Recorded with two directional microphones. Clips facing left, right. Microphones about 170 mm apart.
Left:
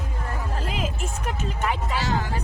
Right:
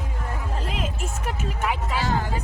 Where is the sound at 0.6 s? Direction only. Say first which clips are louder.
Left 1 dB; centre (ahead or behind).